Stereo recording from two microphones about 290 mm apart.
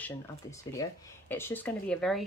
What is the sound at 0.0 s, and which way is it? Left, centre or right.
Speech, centre.